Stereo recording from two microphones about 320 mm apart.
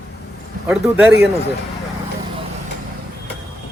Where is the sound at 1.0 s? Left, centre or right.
Right.